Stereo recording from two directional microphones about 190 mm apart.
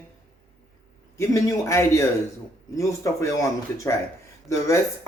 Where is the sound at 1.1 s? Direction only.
15° left (ahead or behind).